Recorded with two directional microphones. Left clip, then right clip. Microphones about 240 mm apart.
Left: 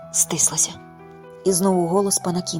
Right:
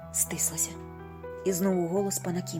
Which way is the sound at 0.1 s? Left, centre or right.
Left.